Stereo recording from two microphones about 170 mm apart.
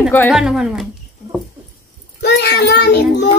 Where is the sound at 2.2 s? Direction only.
75° left (ahead or behind).